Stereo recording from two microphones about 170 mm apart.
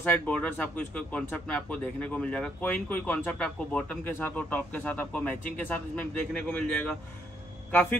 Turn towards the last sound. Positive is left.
turn(degrees=10)  # may be behind; listen again after turning